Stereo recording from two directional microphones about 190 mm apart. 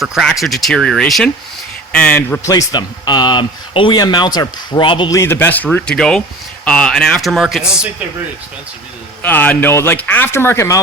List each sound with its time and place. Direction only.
0.0 s speech: centre (ahead or behind)
9.2 s speech: 10° left (ahead or behind)